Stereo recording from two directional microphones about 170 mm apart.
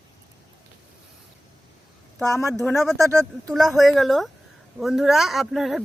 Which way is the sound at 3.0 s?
20° right (ahead or behind).